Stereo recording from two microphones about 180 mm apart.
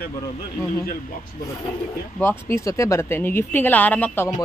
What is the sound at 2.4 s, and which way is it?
A woman's voice, 15° left (ahead or behind).